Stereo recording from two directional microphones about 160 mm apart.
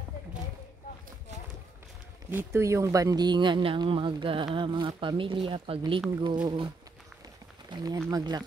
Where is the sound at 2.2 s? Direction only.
15° right (ahead or behind).